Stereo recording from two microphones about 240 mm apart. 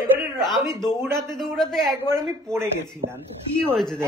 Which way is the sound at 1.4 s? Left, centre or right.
Centre.